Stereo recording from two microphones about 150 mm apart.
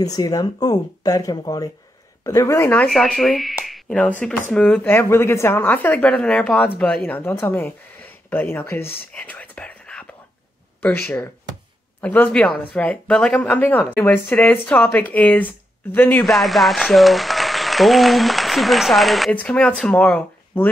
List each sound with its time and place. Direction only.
0.0 s speech: 25° left (ahead or behind)
2.9 s speech: centre (ahead or behind)
9.1 s whispering: 10° left (ahead or behind)
10.8 s speech: 10° left (ahead or behind)
16.3 s speech: centre (ahead or behind)